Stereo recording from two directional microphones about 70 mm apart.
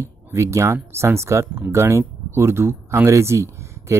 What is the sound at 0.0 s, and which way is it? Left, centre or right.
Speech, right.